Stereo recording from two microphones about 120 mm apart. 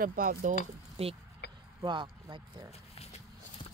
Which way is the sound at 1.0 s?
55° right (ahead or behind).